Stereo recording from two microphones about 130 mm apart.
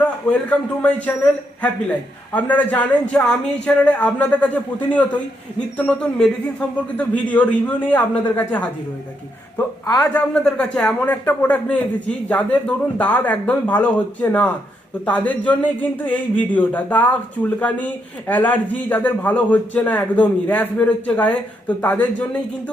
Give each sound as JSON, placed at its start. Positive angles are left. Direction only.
{"t": 0.0, "sound": "a man's voice", "side_deg": 10}
{"t": 9.8, "sound": "a man's voice", "side_deg": 25}
{"t": 10.2, "sound": "a man's voice", "side_deg": 10}